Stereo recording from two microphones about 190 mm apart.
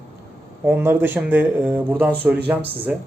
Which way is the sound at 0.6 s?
10° right (ahead or behind).